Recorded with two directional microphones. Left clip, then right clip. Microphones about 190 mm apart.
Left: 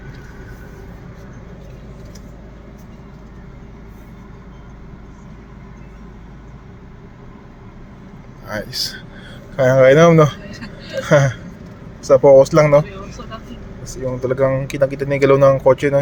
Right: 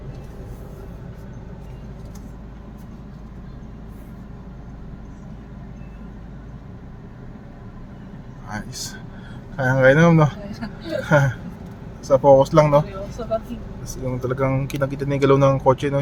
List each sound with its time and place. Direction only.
8.4 s speech: 10° left (ahead or behind)
14.1 s speech: 5° left (ahead or behind)